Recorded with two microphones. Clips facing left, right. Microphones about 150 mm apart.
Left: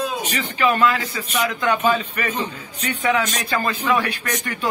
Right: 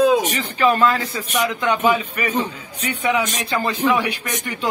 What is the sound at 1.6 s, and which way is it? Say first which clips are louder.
A man's voice: right 1 dB; 15° right (ahead or behind).